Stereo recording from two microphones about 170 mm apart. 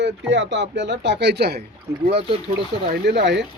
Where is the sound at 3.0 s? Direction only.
90° right.